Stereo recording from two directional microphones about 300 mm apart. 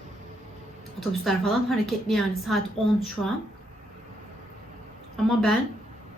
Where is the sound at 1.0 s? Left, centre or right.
Centre.